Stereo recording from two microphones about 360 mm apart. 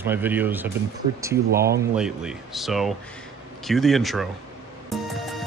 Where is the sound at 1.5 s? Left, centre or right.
Right.